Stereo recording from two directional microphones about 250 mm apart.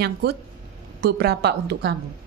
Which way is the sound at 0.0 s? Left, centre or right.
Right.